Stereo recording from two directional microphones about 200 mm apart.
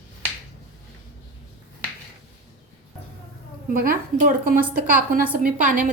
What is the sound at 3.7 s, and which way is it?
A woman's voice, 45° right (ahead or behind).